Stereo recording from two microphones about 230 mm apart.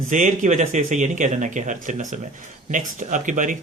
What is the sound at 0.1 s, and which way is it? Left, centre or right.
Speech, right.